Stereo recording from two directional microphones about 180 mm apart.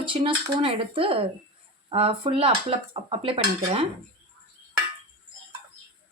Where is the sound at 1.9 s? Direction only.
30° right (ahead or behind).